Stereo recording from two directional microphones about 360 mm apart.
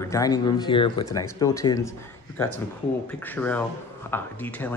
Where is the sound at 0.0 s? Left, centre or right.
Centre.